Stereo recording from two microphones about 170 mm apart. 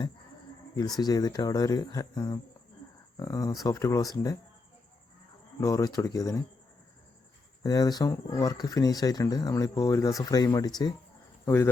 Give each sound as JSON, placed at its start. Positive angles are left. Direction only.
{"t": 0.8, "sound": "speech", "side_deg": 25}
{"t": 5.5, "sound": "speech", "side_deg": 20}
{"t": 7.6, "sound": "speech", "side_deg": 20}